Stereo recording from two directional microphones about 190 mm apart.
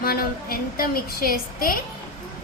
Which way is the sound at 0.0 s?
50° left (ahead or behind).